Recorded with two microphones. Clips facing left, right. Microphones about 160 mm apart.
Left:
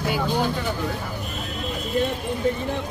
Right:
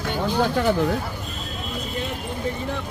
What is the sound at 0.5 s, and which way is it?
Speech, 60° right (ahead or behind).